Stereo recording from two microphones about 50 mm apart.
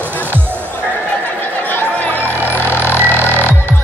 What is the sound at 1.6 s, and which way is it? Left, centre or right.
Music, left.